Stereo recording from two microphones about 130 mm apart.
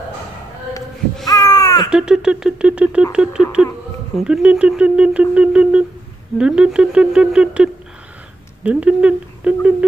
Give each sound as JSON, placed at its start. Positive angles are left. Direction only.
{"t": 1.2, "sound": "caw", "side_deg": 30}
{"t": 1.9, "sound": "speech", "side_deg": -5}